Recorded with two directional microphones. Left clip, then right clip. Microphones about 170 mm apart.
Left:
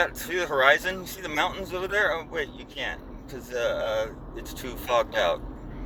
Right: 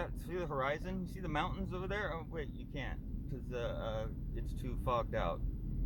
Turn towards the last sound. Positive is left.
turn(degrees=-30)  # may be behind; listen again after turning